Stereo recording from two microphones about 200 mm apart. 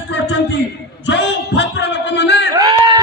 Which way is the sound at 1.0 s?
60° left (ahead or behind).